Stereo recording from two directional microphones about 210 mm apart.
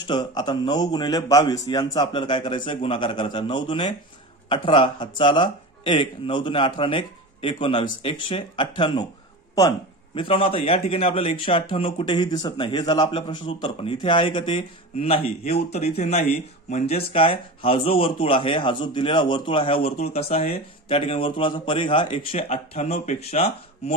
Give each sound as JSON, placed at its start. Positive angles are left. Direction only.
{"t": 0.0, "sound": "speech", "side_deg": 20}